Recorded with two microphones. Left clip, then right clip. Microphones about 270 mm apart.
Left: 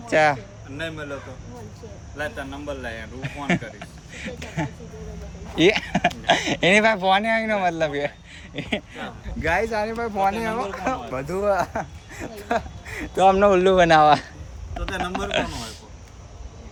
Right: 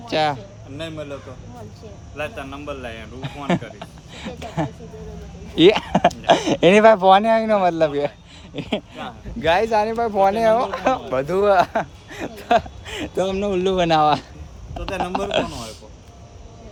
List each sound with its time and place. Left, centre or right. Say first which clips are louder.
0.1 s speech: left 2 dB; centre
3.2 s speech: right 2 dB; centre
9.0 s speech: right 2 dB; centre
11.6 s speech: right 6 dB; right
12.1 s a man's voice: right 7 dB; centre